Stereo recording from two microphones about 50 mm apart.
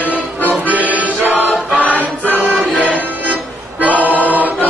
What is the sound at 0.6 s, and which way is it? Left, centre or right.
Music, right.